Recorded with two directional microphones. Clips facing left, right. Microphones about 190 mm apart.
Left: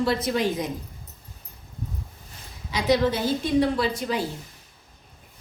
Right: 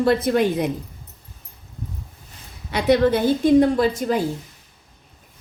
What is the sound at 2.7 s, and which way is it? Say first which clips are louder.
A woman's voice: right 5 dB; 55° right (ahead or behind).